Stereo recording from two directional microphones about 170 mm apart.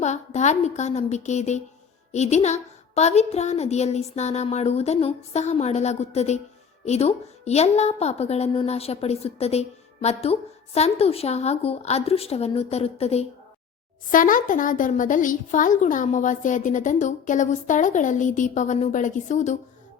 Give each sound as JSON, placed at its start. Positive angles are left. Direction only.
{"t": 0.0, "sound": "a woman's voice", "side_deg": 40}
{"t": 14.1, "sound": "a woman's voice", "side_deg": 55}